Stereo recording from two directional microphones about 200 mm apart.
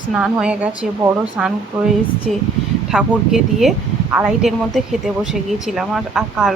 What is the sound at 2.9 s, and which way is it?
Speech, centre (ahead or behind).